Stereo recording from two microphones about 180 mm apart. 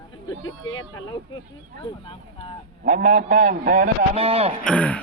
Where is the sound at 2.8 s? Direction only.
45° right (ahead or behind).